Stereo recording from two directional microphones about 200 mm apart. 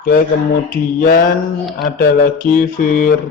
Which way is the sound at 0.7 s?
45° left (ahead or behind).